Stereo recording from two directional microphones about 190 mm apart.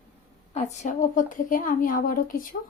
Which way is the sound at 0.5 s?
40° left (ahead or behind).